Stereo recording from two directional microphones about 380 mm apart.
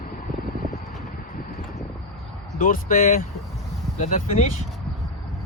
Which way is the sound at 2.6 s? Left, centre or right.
Centre.